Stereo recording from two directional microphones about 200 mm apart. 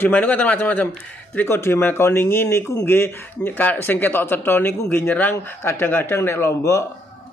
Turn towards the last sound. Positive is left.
turn(degrees=15)  # may be behind; listen again after turning